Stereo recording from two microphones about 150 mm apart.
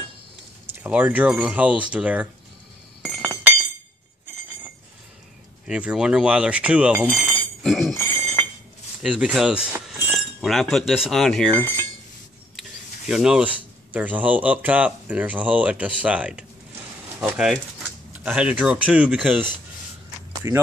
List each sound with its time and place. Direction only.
0.7 s speech: 10° right (ahead or behind)
3.2 s chink: 10° right (ahead or behind)
5.7 s speech: 5° right (ahead or behind)
7.9 s chink: 15° left (ahead or behind)
9.2 s speech: 5° right (ahead or behind)
13.1 s speech: 5° right (ahead or behind)
20.4 s speech: 20° right (ahead or behind)